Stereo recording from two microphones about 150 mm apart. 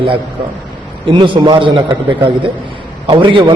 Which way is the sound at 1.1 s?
35° right (ahead or behind).